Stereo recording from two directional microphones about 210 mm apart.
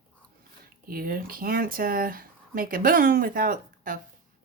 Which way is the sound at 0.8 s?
45° right (ahead or behind).